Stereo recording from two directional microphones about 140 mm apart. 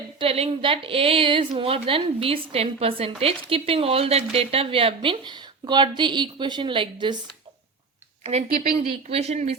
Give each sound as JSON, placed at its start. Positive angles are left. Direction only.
{"t": 0.2, "sound": "a woman's voice", "side_deg": -45}
{"t": 8.2, "sound": "speech", "side_deg": -50}